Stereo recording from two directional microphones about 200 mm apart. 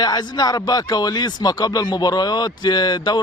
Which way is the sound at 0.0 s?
20° left (ahead or behind).